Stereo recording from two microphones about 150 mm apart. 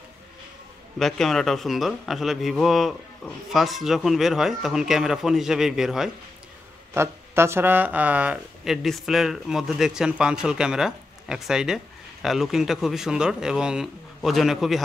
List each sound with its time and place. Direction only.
0.9 s speech: centre (ahead or behind)
6.9 s speech: 15° right (ahead or behind); by 14.8 s centre (ahead or behind)